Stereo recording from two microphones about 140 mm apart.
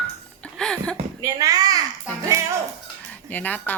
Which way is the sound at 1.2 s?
25° right (ahead or behind).